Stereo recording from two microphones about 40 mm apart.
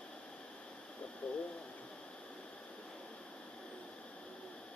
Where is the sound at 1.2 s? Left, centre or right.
Left.